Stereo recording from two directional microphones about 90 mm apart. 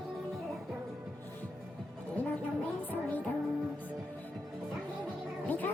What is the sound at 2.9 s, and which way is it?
Music, 20° left (ahead or behind).